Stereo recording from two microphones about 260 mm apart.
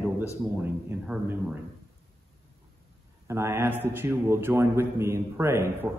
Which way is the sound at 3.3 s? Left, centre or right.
Centre.